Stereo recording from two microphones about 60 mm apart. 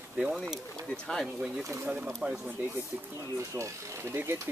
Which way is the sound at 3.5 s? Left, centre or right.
Right.